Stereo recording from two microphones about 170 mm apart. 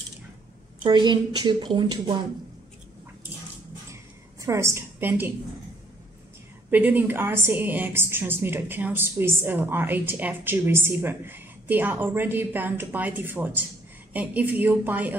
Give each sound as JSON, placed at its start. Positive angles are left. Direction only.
{"t": 0.8, "sound": "a woman's voice", "side_deg": -25}
{"t": 3.9, "sound": "a sound", "side_deg": -15}
{"t": 6.7, "sound": "a woman's voice", "side_deg": -10}